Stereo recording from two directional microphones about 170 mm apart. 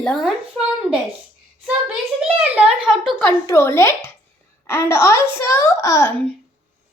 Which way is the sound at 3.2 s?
15° left (ahead or behind).